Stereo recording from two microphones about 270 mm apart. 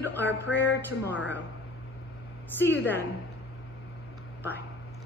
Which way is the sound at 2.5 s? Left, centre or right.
Centre.